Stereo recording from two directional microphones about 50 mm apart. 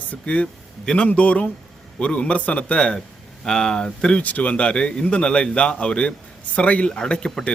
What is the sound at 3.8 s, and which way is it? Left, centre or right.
A man's voice, left.